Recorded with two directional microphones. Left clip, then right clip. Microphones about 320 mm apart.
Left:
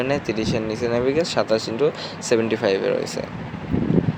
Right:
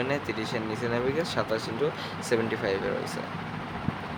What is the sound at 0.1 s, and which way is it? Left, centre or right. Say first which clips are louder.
Speech: left 7 dB; centre.